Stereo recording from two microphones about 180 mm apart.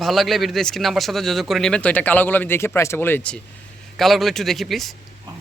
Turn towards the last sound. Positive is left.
turn(degrees=0)  # may be behind; listen again after turning